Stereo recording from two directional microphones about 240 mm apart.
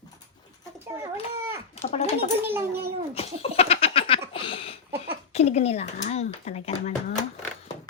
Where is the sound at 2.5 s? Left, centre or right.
Centre.